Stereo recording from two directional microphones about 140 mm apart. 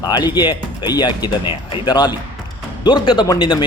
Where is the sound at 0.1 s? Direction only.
30° left (ahead or behind).